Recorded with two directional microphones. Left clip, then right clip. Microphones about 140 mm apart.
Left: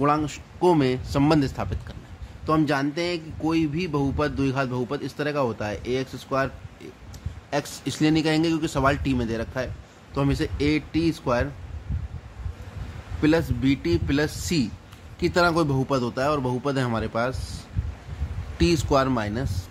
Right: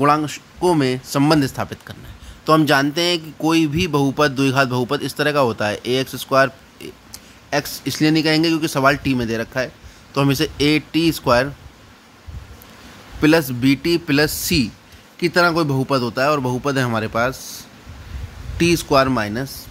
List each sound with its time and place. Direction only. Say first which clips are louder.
0.2 s speech: right 3 dB; 15° right (ahead or behind)
2.4 s a man's voice: right 8 dB; 40° right (ahead or behind)
7.4 s speech: right 6 dB; 20° right (ahead or behind)
10.1 s a man's voice: right 7 dB; 35° right (ahead or behind)
13.2 s speech: right 7 dB; 30° right (ahead or behind)
18.6 s speech: right 6 dB; 20° right (ahead or behind)